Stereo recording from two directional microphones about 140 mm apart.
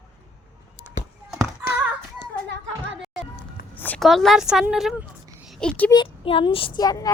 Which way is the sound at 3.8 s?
10° left (ahead or behind).